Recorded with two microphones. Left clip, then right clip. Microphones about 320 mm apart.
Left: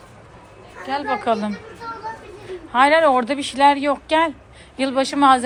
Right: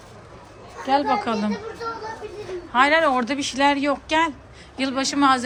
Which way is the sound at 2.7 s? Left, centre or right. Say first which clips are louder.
Left 3 dB; centre.